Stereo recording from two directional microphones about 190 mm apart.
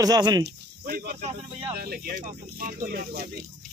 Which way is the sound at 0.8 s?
50° right (ahead or behind).